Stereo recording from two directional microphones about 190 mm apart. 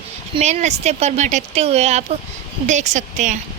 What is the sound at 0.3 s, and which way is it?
Speech, 35° right (ahead or behind).